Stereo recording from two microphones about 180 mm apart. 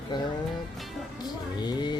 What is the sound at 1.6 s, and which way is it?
Speech, 25° left (ahead or behind).